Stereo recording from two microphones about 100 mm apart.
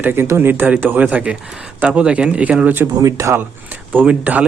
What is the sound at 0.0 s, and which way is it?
Speech, 20° right (ahead or behind).